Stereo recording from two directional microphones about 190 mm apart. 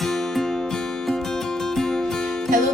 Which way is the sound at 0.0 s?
Centre (ahead or behind).